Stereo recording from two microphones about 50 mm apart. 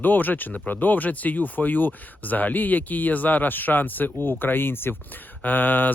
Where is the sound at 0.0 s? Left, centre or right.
Left.